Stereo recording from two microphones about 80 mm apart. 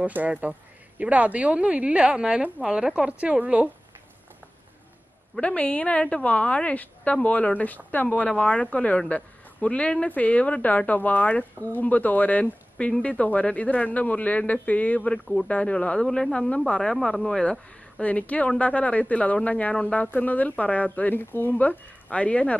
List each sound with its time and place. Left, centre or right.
0.0 s speech: centre
5.3 s speech: centre